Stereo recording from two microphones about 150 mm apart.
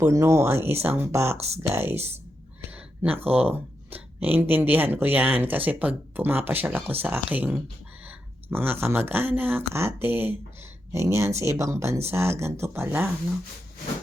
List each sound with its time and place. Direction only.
0.0 s speech: 20° right (ahead or behind)
2.6 s a sound: 10° right (ahead or behind)
3.3 s speech: 10° right (ahead or behind)